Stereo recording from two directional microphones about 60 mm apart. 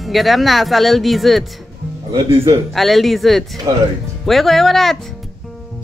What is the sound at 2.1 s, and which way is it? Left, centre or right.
Speech, right.